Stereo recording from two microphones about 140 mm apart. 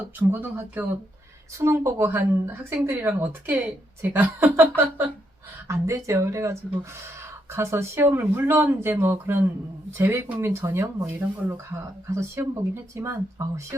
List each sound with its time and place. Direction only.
0.2 s speech: 15° right (ahead or behind)